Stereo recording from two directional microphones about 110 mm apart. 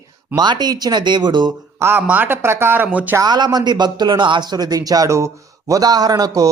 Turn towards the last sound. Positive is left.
turn(degrees=-35)  # may be behind; listen again after turning